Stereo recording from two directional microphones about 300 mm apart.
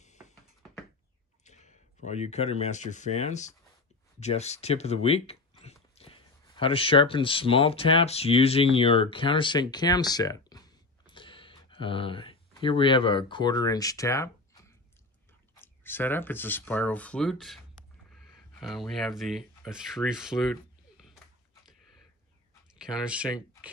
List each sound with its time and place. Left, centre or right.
0.0 s a sound: left
1.4 s speech: left; by 20.5 s centre
22.8 s speech: centre